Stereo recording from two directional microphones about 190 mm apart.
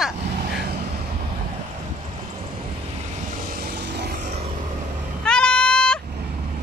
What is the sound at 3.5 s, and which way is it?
Vehicle, 55° right (ahead or behind).